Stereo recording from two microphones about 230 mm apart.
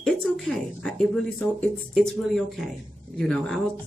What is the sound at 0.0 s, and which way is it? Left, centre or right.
Speech, centre.